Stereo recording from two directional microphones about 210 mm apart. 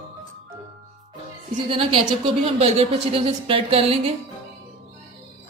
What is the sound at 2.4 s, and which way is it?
Speech, 30° right (ahead or behind).